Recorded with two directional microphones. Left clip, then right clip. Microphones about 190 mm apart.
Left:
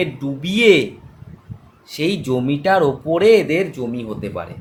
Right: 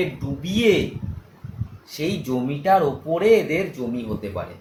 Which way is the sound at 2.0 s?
55° left (ahead or behind).